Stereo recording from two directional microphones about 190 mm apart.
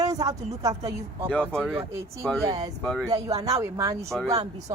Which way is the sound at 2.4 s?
20° right (ahead or behind).